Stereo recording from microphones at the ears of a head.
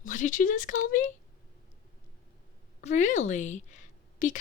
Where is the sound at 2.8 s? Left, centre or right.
Left.